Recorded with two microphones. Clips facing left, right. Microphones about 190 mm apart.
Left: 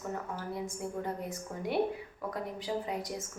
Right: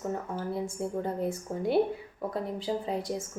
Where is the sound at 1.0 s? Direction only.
30° right (ahead or behind).